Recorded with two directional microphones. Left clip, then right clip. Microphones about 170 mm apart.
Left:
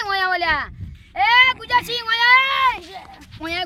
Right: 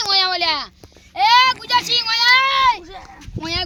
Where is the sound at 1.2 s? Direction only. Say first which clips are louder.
Right 1 dB; 35° left (ahead or behind).